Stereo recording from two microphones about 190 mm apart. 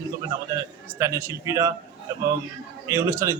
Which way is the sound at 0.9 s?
15° right (ahead or behind).